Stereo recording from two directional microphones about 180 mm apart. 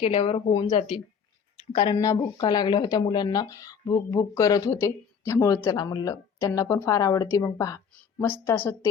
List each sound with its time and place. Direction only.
0.0 s speech: 30° left (ahead or behind)
1.5 s a woman's voice: 25° left (ahead or behind)